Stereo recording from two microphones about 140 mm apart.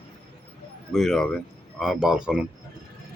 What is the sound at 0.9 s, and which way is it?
Speech, centre (ahead or behind).